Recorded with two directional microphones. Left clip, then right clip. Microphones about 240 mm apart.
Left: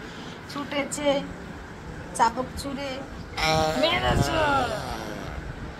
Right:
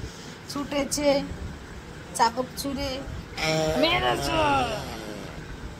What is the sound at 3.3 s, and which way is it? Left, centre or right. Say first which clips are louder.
Speech: left 2 dB; centre.